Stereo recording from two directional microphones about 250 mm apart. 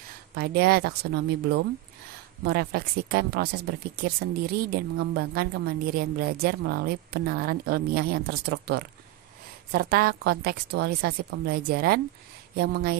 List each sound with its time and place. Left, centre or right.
0.3 s a woman's voice: right